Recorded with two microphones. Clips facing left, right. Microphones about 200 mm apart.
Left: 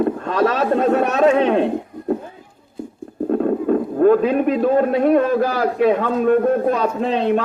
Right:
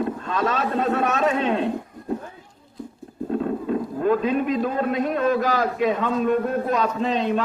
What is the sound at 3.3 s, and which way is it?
A man's voice, 55° left (ahead or behind).